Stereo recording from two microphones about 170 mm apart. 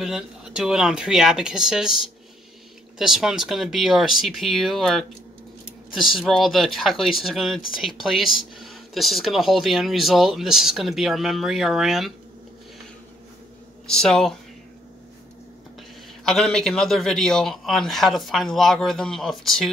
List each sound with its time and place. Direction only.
0.0 s speech: 5° right (ahead or behind)
3.0 s speech: 5° right (ahead or behind)
13.8 s speech: 5° left (ahead or behind)
16.3 s speech: centre (ahead or behind)